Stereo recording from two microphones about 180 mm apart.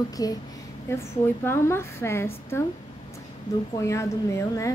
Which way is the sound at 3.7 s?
15° left (ahead or behind).